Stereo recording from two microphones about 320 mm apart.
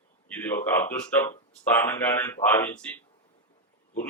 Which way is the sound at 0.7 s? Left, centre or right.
Centre.